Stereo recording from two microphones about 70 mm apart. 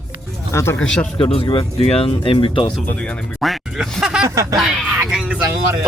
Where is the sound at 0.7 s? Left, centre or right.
Centre.